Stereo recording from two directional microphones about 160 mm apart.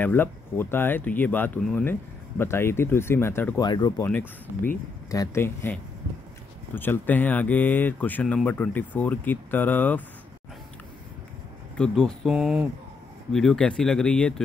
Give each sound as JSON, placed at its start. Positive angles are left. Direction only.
{"t": 0.0, "sound": "speech", "side_deg": 15}
{"t": 3.6, "sound": "speech", "side_deg": 25}
{"t": 4.0, "sound": "speech", "side_deg": 15}
{"t": 11.7, "sound": "speech", "side_deg": 5}